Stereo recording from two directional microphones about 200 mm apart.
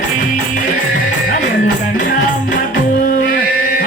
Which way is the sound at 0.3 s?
40° left (ahead or behind).